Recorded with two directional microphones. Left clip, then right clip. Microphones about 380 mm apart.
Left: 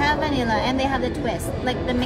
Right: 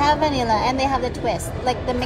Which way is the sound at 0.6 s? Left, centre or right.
Right.